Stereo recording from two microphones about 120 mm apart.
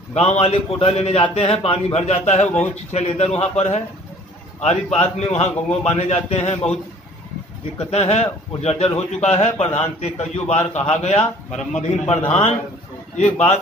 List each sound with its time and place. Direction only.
0.1 s a man's voice: 65° left (ahead or behind)
2.4 s speech: 10° left (ahead or behind)
2.9 s a man's voice: 65° left (ahead or behind)
4.9 s a man's voice: 60° left (ahead or behind)
7.8 s a man's voice: 60° left (ahead or behind)